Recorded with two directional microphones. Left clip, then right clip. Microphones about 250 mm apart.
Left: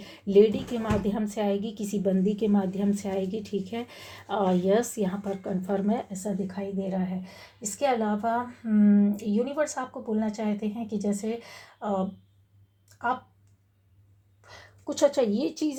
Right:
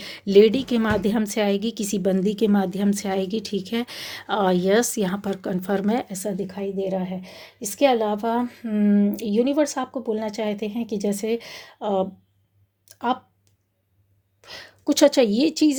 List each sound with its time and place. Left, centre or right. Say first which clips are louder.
0.0 s a woman's voice: right 5 dB; right
14.4 s a woman's voice: right 10 dB; right